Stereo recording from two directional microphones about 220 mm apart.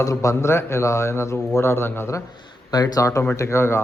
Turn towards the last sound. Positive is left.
turn(degrees=10)  # may be behind; listen again after turning